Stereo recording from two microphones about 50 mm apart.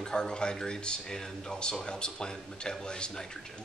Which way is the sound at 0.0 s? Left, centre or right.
Centre.